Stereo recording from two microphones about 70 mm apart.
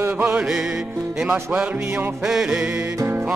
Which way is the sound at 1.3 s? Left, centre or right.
Centre.